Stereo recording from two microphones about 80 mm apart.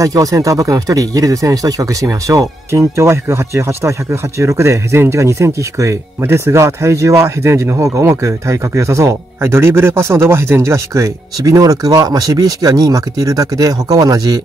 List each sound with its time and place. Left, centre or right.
0.0 s speech: right
11.4 s speech: right